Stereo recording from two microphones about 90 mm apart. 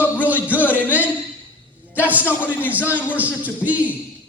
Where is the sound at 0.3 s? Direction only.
20° right (ahead or behind).